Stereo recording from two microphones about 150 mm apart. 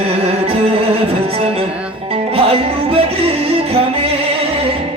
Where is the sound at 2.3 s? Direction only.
40° right (ahead or behind).